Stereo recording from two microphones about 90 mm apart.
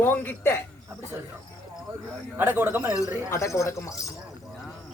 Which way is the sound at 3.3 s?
35° left (ahead or behind).